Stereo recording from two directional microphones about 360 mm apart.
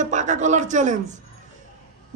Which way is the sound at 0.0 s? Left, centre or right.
Centre.